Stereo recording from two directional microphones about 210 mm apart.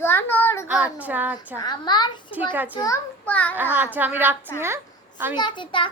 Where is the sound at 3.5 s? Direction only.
10° right (ahead or behind).